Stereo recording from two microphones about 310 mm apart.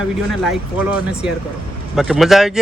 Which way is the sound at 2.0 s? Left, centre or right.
Centre.